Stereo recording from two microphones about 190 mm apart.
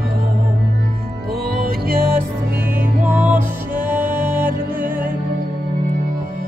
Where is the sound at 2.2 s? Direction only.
10° right (ahead or behind).